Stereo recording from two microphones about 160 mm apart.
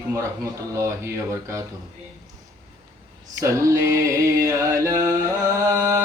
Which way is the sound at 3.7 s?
20° right (ahead or behind).